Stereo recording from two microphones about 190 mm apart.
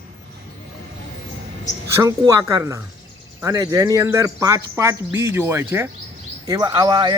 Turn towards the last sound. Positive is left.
turn(degrees=-25)  # may be behind; listen again after turning